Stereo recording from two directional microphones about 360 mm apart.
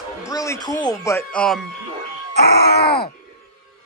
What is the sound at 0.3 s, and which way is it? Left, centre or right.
Speech, centre.